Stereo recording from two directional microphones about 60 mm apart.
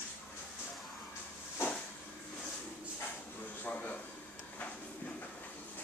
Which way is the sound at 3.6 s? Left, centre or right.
Left.